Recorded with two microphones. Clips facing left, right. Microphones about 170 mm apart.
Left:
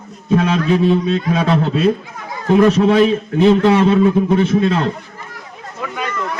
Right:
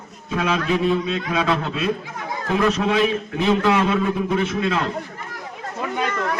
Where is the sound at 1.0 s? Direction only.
50° left (ahead or behind).